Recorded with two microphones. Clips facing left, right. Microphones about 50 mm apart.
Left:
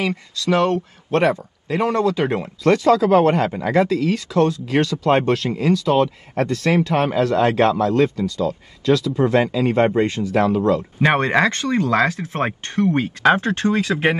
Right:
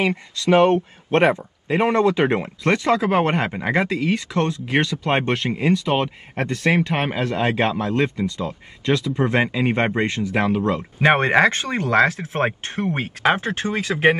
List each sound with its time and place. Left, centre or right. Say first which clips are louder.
0.0 s speech: right 1 dB; right
12.4 s speech: left 4 dB; centre